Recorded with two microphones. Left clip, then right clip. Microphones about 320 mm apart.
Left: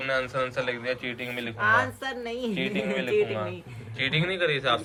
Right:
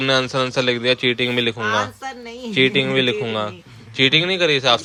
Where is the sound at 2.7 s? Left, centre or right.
Centre.